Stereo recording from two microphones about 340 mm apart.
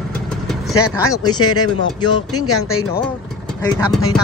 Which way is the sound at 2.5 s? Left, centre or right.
Left.